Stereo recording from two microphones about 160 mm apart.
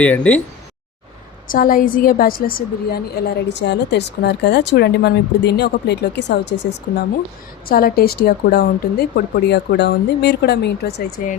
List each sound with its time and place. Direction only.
0.0 s speech: 10° left (ahead or behind)
1.5 s a woman's voice: 60° left (ahead or behind); by 6.7 s 90° left
7.7 s speech: 70° left (ahead or behind); by 10.9 s 90° left